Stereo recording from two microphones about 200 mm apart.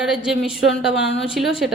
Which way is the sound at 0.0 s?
5° right (ahead or behind).